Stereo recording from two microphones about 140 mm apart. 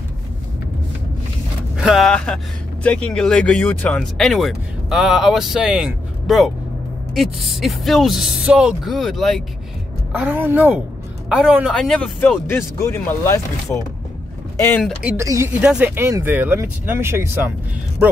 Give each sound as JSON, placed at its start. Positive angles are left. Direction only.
{"t": 1.8, "sound": "speech", "side_deg": 0}
{"t": 10.1, "sound": "speech", "side_deg": -10}
{"t": 12.4, "sound": "speech", "side_deg": 20}
{"t": 15.0, "sound": "speech", "side_deg": -20}
{"t": 15.6, "sound": "speech", "side_deg": -5}
{"t": 15.9, "sound": "speech", "side_deg": -15}